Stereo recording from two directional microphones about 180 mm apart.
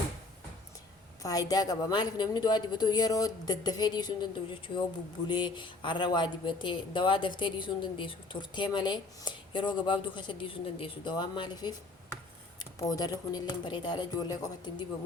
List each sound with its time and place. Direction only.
1.2 s speech: 20° left (ahead or behind)
5.3 s speech: 25° left (ahead or behind)
12.9 s speech: 20° left (ahead or behind)